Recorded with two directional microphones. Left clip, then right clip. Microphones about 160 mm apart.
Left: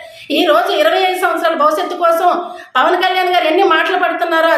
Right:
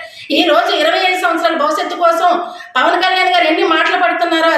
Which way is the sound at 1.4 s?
35° left (ahead or behind).